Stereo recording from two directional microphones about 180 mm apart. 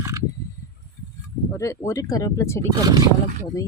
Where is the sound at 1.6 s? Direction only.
15° left (ahead or behind).